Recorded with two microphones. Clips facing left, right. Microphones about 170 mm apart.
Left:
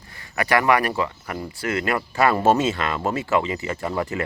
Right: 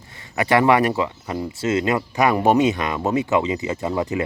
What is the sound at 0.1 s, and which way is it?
Speech, 25° right (ahead or behind).